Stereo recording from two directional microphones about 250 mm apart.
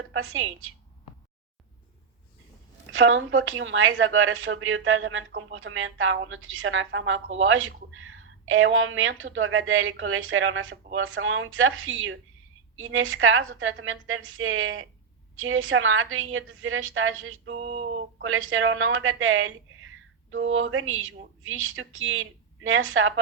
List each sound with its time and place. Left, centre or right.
0.1 s a woman's voice: right
2.9 s a woman's voice: right
17.6 s a sound: right
18.2 s a woman's voice: right